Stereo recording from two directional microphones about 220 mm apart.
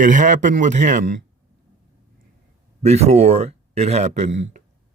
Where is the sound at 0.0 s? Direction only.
35° right (ahead or behind).